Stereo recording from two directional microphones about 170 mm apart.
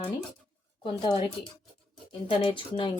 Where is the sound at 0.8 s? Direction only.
30° left (ahead or behind).